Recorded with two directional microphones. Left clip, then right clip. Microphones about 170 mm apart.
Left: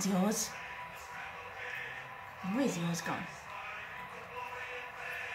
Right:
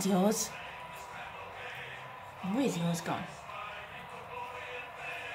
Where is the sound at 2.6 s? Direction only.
50° right (ahead or behind).